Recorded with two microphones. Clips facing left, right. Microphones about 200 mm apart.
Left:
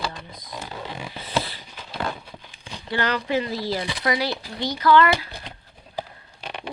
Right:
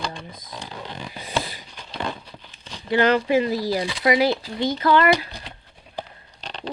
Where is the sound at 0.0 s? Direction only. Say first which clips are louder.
Even; centre (ahead or behind).